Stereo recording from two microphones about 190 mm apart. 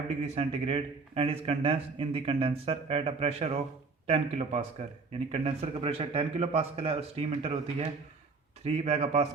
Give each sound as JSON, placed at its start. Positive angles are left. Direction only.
{"t": 0.2, "sound": "speech", "side_deg": -30}